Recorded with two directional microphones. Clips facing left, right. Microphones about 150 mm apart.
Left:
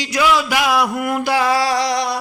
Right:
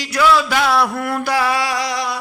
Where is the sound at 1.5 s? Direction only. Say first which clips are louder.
Left 3 dB; 35° left (ahead or behind).